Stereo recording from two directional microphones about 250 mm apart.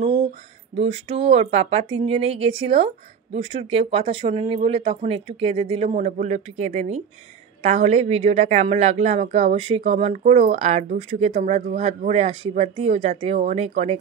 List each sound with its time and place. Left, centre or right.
0.7 s speech: right